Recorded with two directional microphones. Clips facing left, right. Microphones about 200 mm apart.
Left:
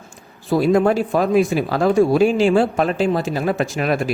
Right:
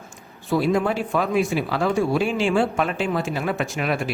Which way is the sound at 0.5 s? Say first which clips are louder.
Left 5 dB; 50° left (ahead or behind).